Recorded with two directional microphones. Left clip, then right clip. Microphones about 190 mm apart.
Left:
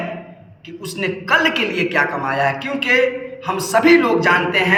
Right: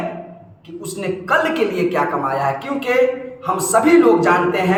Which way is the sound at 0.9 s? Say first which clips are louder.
Left 1 dB; 15° right (ahead or behind).